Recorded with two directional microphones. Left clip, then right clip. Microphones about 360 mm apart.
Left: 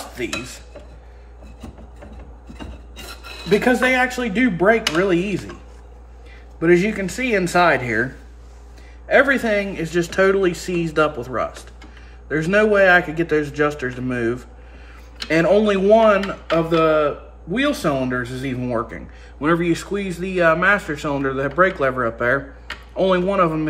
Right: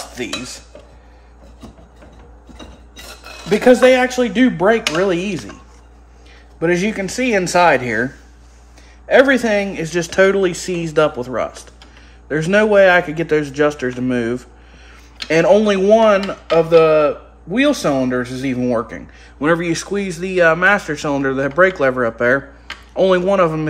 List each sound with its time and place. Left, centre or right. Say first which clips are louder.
0.1 s dishes: right 1 dB; right
3.4 s speech: right 6 dB; right
6.6 s speech: left 1 dB; right